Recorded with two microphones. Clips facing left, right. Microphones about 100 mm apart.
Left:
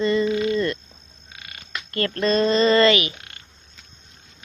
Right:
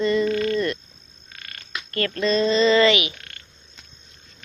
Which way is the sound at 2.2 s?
45° left (ahead or behind).